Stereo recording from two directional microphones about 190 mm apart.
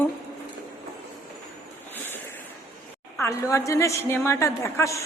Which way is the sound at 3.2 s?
15° left (ahead or behind).